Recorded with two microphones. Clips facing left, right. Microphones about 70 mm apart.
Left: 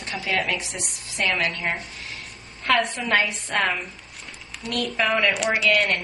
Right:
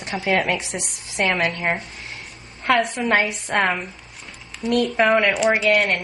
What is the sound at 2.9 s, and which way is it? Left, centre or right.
Speech, centre.